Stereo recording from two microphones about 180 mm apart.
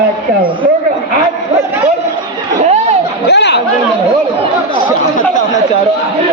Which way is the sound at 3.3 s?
70° left (ahead or behind).